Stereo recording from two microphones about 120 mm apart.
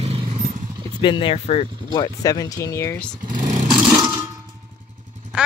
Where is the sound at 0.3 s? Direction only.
85° right.